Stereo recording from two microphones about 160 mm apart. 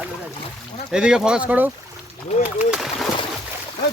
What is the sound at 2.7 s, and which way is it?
Speech, centre (ahead or behind).